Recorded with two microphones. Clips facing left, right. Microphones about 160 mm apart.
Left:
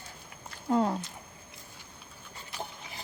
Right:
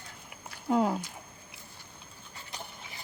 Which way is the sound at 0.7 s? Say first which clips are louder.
Even; 5° right (ahead or behind).